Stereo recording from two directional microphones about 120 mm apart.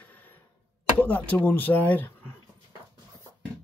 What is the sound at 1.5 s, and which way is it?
Speech, 15° left (ahead or behind).